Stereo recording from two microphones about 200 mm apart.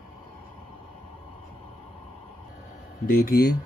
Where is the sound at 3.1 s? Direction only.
45° left (ahead or behind).